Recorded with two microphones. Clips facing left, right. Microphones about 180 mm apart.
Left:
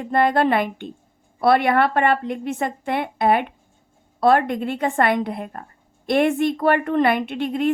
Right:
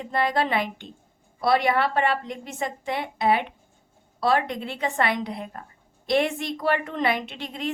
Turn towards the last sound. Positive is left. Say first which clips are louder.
# left 10 dB
turn(degrees=55)  # may be behind; listen again after turning